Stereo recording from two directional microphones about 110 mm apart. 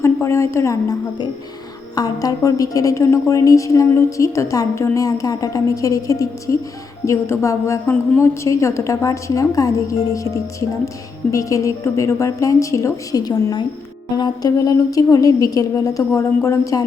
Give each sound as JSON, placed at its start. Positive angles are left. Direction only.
{"t": 0.0, "sound": "a woman's voice", "side_deg": 25}